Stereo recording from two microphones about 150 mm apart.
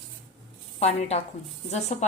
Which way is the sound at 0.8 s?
45° left (ahead or behind).